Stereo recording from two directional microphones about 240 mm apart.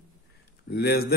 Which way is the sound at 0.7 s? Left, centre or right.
Left.